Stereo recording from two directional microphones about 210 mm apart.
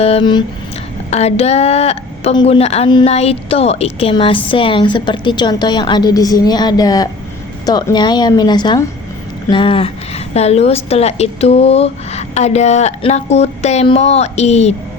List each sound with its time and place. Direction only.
0.0 s a woman's voice: 25° left (ahead or behind)